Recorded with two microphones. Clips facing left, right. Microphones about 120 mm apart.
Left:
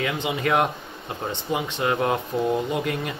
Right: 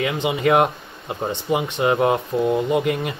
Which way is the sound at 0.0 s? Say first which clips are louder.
Right 5 dB; 15° right (ahead or behind).